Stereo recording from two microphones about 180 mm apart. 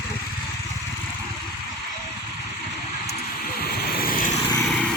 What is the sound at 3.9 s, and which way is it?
Vehicle, 55° left (ahead or behind).